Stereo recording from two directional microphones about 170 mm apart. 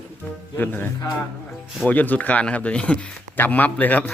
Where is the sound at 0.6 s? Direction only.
10° left (ahead or behind).